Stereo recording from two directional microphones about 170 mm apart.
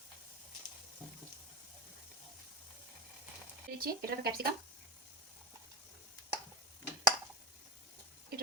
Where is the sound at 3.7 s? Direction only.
65° right (ahead or behind).